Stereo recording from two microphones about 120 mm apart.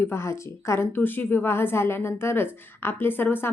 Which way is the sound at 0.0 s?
20° left (ahead or behind).